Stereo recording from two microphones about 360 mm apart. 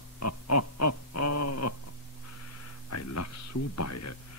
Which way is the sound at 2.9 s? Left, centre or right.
Left.